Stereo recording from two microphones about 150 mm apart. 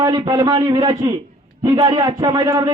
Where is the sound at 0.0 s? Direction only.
25° right (ahead or behind).